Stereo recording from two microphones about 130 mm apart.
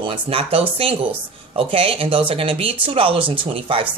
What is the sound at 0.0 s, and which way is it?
Speech, 45° right (ahead or behind).